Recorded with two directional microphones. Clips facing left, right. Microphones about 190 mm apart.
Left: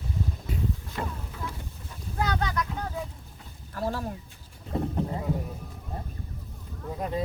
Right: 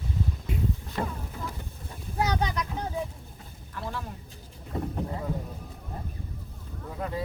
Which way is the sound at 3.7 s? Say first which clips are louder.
Left 5 dB; 40° left (ahead or behind).